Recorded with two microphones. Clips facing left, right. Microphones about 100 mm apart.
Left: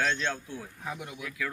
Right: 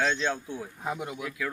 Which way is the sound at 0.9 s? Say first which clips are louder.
Right 5 dB; 30° right (ahead or behind).